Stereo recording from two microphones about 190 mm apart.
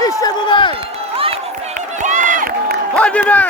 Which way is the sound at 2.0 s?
40° right (ahead or behind).